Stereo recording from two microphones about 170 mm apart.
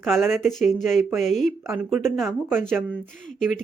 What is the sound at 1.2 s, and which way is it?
Speech, 45° left (ahead or behind).